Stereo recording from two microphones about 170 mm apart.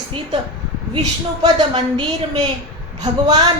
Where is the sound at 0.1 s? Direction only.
30° right (ahead or behind).